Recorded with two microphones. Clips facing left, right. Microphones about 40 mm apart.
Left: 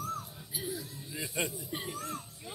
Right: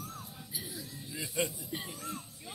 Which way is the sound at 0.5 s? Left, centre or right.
Left.